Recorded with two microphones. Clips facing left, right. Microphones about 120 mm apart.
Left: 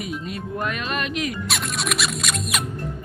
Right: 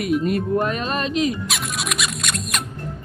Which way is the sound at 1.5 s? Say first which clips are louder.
Left 1 dB; centre (ahead or behind).